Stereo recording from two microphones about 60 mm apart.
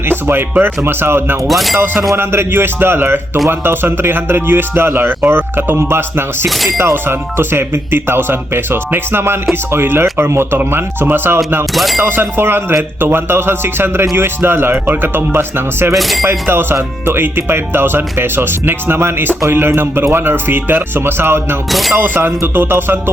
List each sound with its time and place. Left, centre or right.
0.1 s music: right
0.9 s speech: right
1.5 s speech: centre
1.8 s speech: right
6.5 s speech: centre
6.7 s speech: right
11.7 s speech: centre
11.9 s speech: right
16.0 s speech: centre
16.2 s speech: right
21.7 s speech: centre
21.9 s speech: right